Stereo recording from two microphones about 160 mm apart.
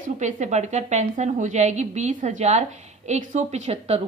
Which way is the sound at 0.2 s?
45° right (ahead or behind).